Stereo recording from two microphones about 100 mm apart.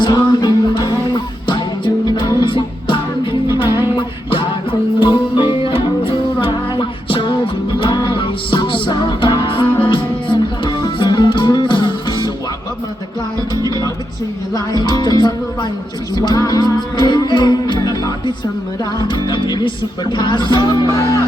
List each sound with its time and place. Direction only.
0.0 s music: 45° left (ahead or behind)
9.6 s music: 15° left (ahead or behind)
9.9 s music: 55° left (ahead or behind)
13.6 s music: 40° right (ahead or behind)
14.5 s music: 45° left (ahead or behind)